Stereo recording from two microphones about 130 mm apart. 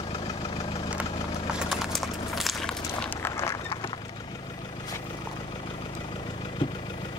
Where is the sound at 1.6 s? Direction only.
5° right (ahead or behind).